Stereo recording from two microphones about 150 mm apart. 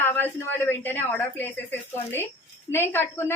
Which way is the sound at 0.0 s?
15° left (ahead or behind).